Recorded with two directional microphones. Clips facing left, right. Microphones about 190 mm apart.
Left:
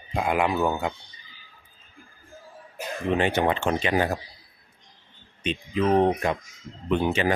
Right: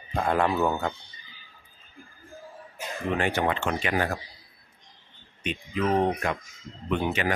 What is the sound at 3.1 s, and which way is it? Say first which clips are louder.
Speech: left 3 dB; 20° left (ahead or behind).